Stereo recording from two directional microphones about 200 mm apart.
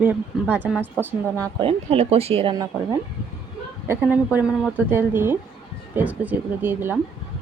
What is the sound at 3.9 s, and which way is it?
A woman's voice, 10° right (ahead or behind).